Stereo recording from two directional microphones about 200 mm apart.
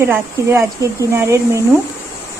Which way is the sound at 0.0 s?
15° right (ahead or behind).